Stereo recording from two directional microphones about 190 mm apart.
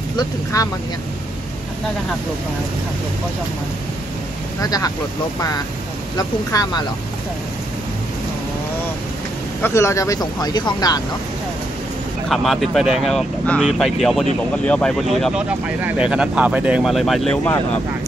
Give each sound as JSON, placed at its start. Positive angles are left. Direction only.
{"t": 0.5, "sound": "speech", "side_deg": 15}
{"t": 4.6, "sound": "speech", "side_deg": 20}
{"t": 6.1, "sound": "speech", "side_deg": 20}
{"t": 9.6, "sound": "speech", "side_deg": 15}
{"t": 12.3, "sound": "speech", "side_deg": 0}
{"t": 15.2, "sound": "speech", "side_deg": -5}